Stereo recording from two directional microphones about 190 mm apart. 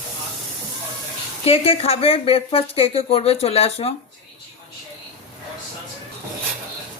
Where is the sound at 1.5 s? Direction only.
30° left (ahead or behind).